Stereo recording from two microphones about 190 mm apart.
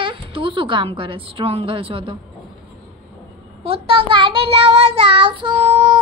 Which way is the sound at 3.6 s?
30° right (ahead or behind).